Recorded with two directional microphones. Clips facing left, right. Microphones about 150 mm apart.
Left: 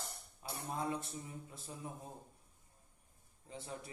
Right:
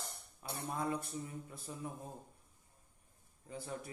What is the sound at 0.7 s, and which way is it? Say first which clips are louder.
Mantra: right 1 dB; 25° left (ahead or behind).